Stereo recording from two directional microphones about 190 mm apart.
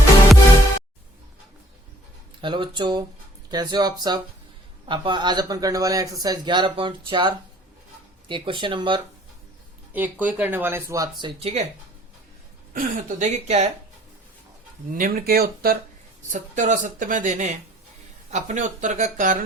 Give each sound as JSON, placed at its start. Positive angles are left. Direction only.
{"t": 2.4, "sound": "speech", "side_deg": -25}
{"t": 9.9, "sound": "speech", "side_deg": -10}
{"t": 11.2, "sound": "speech", "side_deg": -30}
{"t": 12.7, "sound": "speech", "side_deg": -45}
{"t": 14.8, "sound": "speech", "side_deg": -45}
{"t": 16.3, "sound": "speech", "side_deg": -40}